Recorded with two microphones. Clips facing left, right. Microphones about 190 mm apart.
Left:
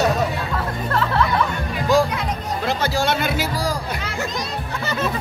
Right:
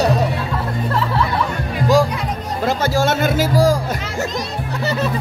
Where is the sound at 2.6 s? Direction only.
50° right (ahead or behind).